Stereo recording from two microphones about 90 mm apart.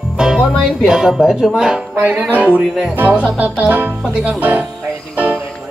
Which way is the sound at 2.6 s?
Centre (ahead or behind).